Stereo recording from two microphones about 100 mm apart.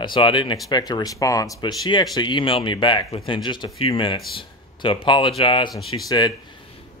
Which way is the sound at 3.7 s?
70° left (ahead or behind).